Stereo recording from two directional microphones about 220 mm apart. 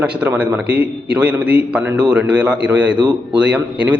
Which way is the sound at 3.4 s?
5° right (ahead or behind).